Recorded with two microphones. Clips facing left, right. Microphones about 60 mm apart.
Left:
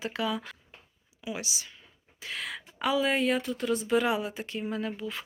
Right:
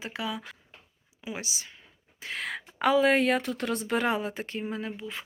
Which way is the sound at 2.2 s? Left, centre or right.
Right.